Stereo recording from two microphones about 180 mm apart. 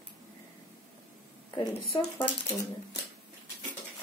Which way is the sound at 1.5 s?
30° left (ahead or behind).